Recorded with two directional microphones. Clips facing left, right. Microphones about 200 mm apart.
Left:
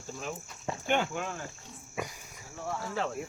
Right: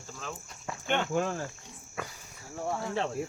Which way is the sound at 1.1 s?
40° right (ahead or behind).